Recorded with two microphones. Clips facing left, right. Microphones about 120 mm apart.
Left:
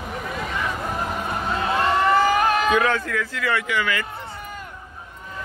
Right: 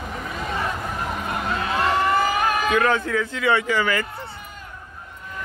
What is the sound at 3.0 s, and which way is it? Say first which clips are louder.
Speech: right 3 dB; 25° right (ahead or behind).